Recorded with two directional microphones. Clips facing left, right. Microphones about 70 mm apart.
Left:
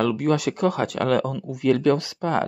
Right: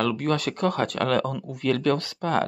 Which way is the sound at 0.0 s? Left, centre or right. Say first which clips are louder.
Left 3 dB; centre.